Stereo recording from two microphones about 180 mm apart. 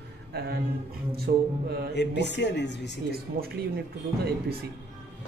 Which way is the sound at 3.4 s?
50° right (ahead or behind).